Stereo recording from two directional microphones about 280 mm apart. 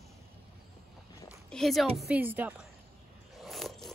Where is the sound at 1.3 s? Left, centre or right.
Centre.